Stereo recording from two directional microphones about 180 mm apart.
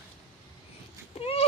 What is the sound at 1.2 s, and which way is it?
Speech, 35° left (ahead or behind).